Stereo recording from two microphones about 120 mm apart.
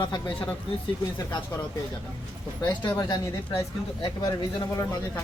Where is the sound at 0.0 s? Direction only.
35° left (ahead or behind).